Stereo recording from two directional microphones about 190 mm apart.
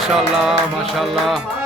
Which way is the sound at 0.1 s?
Centre (ahead or behind).